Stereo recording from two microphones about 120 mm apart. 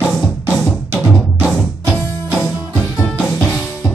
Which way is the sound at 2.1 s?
15° left (ahead or behind).